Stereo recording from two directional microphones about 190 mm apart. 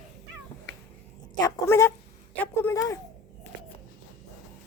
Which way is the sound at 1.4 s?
15° left (ahead or behind).